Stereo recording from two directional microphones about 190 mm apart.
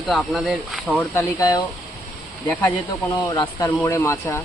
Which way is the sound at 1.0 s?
15° left (ahead or behind).